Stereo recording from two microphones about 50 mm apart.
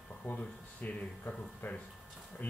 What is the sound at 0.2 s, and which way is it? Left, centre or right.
Speech, left.